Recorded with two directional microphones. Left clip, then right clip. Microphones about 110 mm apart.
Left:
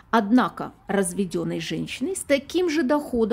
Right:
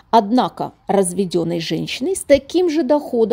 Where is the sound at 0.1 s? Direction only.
50° right (ahead or behind); by 2.1 s 70° right (ahead or behind).